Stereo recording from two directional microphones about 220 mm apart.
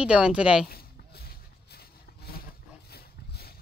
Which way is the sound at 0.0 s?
5° right (ahead or behind).